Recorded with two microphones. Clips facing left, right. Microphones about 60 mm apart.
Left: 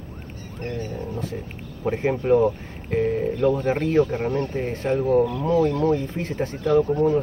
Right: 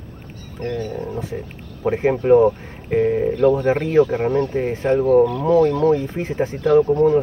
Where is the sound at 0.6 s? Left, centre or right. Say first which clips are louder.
Right 5 dB; right.